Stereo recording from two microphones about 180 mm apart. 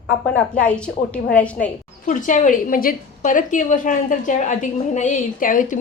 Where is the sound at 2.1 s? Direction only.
45° left (ahead or behind).